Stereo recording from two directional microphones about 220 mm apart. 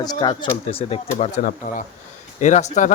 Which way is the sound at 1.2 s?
35° left (ahead or behind).